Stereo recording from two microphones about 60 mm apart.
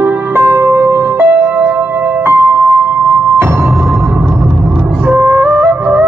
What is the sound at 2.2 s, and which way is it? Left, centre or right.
Music, right.